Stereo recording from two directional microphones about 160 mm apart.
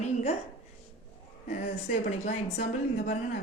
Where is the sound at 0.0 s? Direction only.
45° left (ahead or behind).